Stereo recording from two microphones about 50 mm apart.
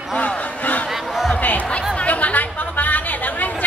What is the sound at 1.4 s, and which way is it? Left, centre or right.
Music, left.